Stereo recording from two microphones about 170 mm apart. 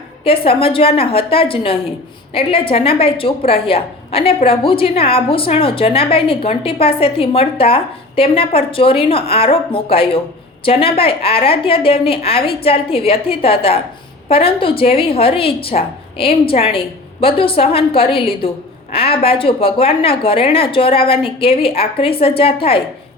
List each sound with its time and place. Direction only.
0.3 s a woman's voice: 35° left (ahead or behind)